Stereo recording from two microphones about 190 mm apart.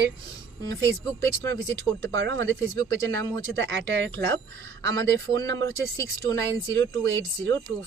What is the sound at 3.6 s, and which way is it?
Speech, 65° right (ahead or behind).